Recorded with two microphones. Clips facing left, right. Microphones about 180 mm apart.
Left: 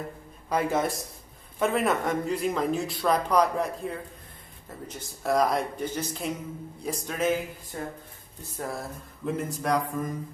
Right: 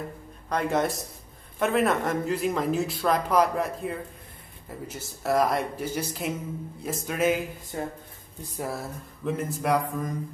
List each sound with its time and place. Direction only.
0.5 s speech: 5° left (ahead or behind)
7.7 s speech: 20° right (ahead or behind)
8.4 s speech: 10° right (ahead or behind)